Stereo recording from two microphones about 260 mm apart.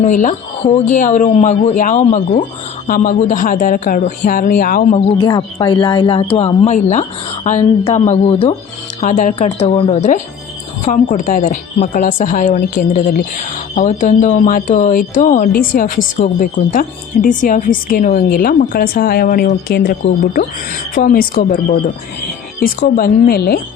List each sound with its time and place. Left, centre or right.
0.0 s speech: left
5.1 s speech: centre; by 23.6 s left